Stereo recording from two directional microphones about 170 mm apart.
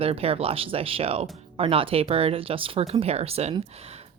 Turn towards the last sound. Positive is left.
turn(degrees=-35)  # may be behind; listen again after turning